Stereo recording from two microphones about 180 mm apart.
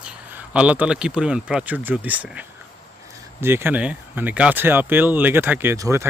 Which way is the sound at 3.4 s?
10° right (ahead or behind).